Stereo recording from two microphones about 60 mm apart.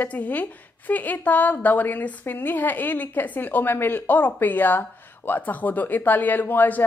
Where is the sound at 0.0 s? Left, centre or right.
Left.